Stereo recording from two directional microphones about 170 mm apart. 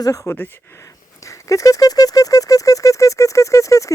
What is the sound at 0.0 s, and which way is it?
Speech, 20° left (ahead or behind).